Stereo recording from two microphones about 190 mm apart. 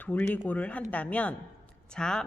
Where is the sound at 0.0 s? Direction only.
10° left (ahead or behind).